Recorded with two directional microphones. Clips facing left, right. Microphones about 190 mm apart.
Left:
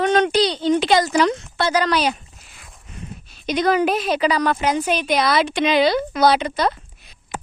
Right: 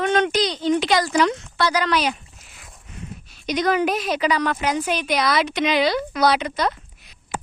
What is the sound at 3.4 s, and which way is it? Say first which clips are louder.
A woman's voice: left 2 dB; 30° left (ahead or behind).